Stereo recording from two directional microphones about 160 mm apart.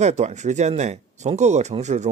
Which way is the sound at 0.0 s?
45° right (ahead or behind).